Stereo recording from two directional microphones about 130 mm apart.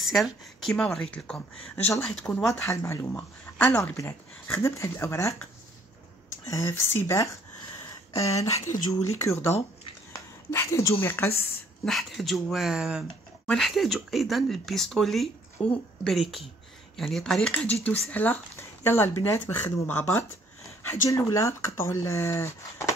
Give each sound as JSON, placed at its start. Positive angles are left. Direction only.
{"t": 0.0, "sound": "speech", "side_deg": 0}
{"t": 4.5, "sound": "speech", "side_deg": 20}
{"t": 6.5, "sound": "speech", "side_deg": 20}
{"t": 11.8, "sound": "speech", "side_deg": 0}